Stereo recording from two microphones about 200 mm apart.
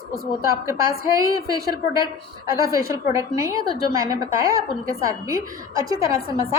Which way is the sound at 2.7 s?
15° right (ahead or behind).